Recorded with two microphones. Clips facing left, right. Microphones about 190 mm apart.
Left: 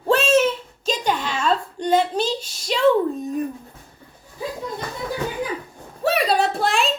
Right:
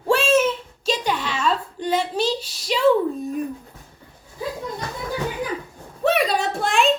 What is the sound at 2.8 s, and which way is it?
Speech, 5° right (ahead or behind).